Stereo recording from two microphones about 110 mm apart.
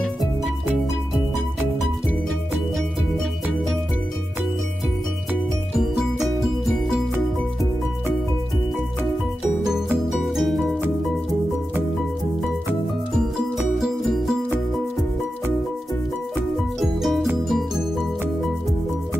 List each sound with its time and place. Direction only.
5.8 s music: centre (ahead or behind)
10.1 s music: centre (ahead or behind)
13.6 s music: centre (ahead or behind)
16.5 s music: centre (ahead or behind)